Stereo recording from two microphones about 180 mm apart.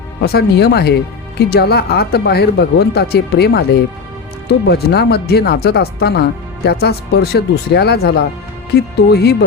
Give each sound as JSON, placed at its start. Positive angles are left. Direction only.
{"t": 0.2, "sound": "speech", "side_deg": 65}